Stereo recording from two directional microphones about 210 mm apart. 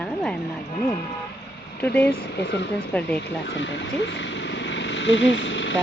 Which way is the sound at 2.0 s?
50° left (ahead or behind).